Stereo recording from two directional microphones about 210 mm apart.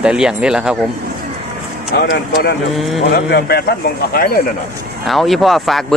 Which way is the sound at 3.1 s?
50° left (ahead or behind).